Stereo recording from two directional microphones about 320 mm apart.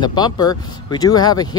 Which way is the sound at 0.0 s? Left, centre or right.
Centre.